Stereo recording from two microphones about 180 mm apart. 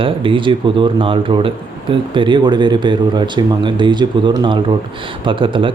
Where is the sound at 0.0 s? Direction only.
30° right (ahead or behind).